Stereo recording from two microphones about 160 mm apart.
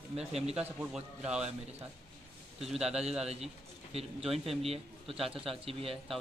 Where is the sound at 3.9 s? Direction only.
40° right (ahead or behind).